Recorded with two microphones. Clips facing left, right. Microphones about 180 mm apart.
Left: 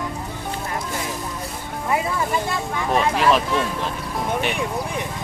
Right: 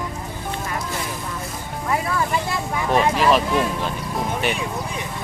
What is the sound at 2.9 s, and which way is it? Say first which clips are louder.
Speech: right 1 dB; centre (ahead or behind).